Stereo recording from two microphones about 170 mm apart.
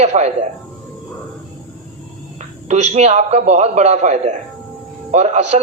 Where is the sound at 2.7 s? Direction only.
40° right (ahead or behind).